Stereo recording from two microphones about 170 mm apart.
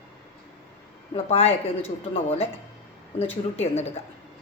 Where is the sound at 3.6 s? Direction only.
40° left (ahead or behind).